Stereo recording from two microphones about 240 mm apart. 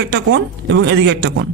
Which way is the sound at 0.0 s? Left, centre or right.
Right.